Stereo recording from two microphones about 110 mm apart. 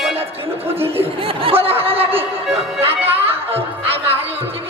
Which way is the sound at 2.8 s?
20° right (ahead or behind).